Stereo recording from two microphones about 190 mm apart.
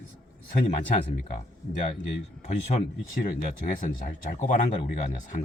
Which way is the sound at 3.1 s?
45° left (ahead or behind).